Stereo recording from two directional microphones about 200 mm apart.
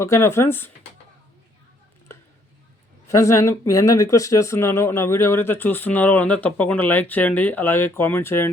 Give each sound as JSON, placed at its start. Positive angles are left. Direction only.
{"t": 0.0, "sound": "speech", "side_deg": 15}
{"t": 3.2, "sound": "speech", "side_deg": 15}